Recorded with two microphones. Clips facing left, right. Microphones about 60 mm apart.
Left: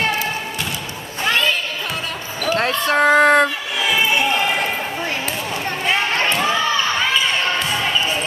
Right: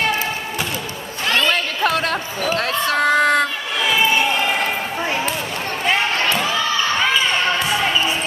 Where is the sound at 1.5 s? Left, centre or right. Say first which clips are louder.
Right 5 dB; right.